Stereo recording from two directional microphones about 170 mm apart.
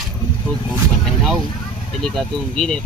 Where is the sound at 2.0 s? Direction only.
5° left (ahead or behind).